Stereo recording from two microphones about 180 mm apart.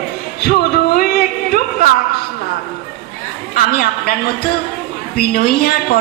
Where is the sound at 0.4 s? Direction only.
55° left (ahead or behind).